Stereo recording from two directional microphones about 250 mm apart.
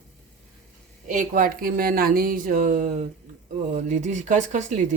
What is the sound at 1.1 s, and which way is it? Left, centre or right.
Speech, right.